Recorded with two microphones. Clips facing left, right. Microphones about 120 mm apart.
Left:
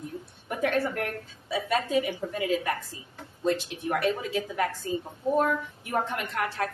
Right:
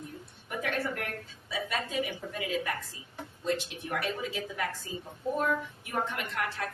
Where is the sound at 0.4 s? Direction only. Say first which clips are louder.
Left 6 dB; 40° left (ahead or behind).